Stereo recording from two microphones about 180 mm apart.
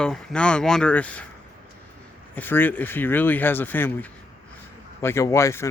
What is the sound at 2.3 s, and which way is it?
Speech, 10° left (ahead or behind).